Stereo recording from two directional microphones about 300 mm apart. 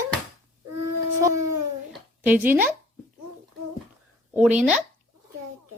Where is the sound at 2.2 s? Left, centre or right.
Centre.